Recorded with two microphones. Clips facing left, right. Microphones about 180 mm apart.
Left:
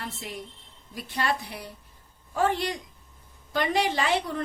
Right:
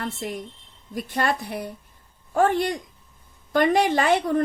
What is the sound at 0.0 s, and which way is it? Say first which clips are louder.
A woman's voice: right 7 dB; 50° right (ahead or behind).